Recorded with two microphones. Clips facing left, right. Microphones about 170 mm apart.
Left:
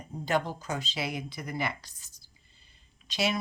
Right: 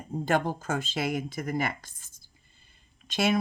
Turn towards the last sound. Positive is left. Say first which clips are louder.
# right 4 dB
turn(degrees=-50)  # may be behind; listen again after turning